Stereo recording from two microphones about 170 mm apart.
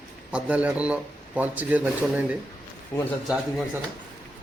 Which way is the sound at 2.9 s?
15° left (ahead or behind).